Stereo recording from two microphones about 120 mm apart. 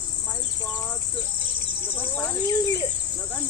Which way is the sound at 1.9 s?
20° left (ahead or behind).